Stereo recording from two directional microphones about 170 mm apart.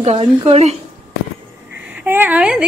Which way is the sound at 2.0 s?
10° right (ahead or behind).